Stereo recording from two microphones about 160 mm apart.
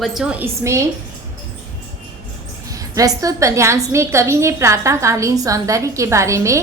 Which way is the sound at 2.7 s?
20° right (ahead or behind).